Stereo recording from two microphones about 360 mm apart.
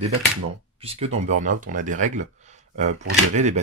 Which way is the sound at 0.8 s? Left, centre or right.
Centre.